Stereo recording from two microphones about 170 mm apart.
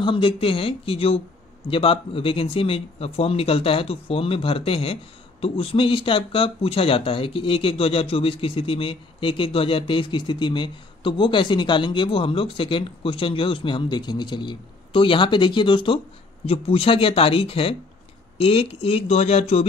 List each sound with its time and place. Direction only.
0.0 s speech: 30° left (ahead or behind)